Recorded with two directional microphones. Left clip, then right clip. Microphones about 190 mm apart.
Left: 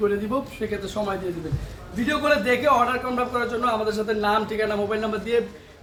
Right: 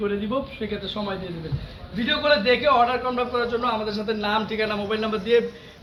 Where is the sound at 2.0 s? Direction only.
Centre (ahead or behind).